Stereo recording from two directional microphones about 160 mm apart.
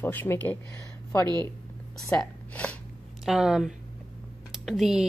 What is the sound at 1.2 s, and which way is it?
Speech, 25° right (ahead or behind).